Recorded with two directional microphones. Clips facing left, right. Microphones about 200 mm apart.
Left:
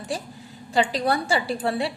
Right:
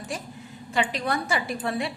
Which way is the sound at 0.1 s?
35° left (ahead or behind).